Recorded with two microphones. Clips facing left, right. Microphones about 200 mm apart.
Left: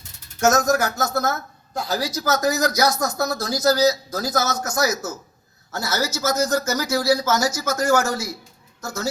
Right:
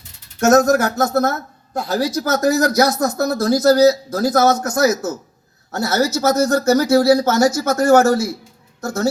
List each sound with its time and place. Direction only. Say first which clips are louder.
0.3 s speech: right 6 dB; 55° right (ahead or behind)